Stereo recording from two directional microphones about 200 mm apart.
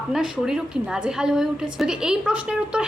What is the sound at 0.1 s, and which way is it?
A woman's voice, 5° right (ahead or behind).